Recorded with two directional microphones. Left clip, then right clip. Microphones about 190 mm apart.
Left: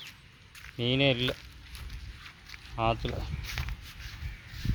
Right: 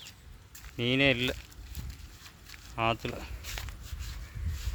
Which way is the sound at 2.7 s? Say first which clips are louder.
Left 1 dB; 10° right (ahead or behind).